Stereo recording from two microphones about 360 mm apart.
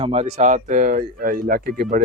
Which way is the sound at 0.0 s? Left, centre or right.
Centre.